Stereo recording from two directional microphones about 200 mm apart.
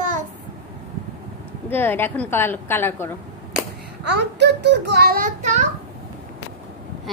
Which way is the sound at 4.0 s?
60° right (ahead or behind).